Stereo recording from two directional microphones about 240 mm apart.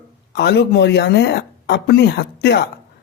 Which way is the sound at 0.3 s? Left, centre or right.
Left.